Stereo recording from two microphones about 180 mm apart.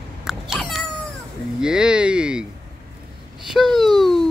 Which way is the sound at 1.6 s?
5° right (ahead or behind).